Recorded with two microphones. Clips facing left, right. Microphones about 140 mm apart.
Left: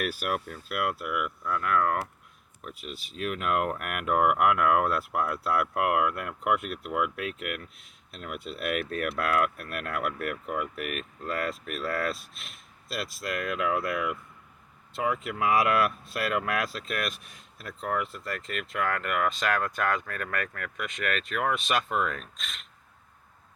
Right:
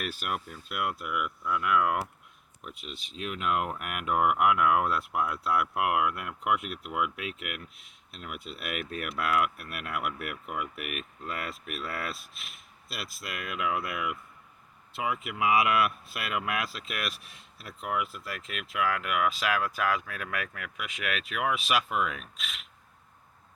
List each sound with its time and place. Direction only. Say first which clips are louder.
0.0 s speech: left 4 dB; 5° left (ahead or behind)
17.3 s a sound: left 4 dB; 50° left (ahead or behind)
17.8 s speech: left 2 dB; 5° right (ahead or behind)